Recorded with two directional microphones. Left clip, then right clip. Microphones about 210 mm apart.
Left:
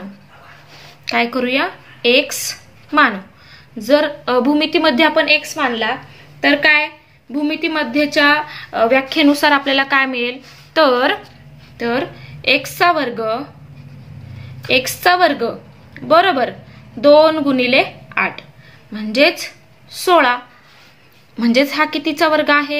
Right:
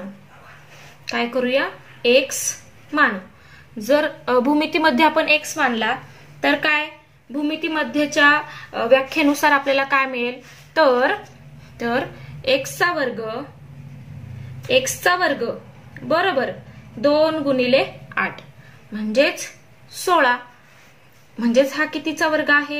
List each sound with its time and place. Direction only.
1.0 s speech: 30° left (ahead or behind)
3.7 s a woman's voice: 20° left (ahead or behind)
11.8 s a woman's voice: 15° left (ahead or behind)
12.4 s a woman's voice: 30° left (ahead or behind)
14.8 s a woman's voice: 35° left (ahead or behind)
21.4 s a woman's voice: 30° left (ahead or behind)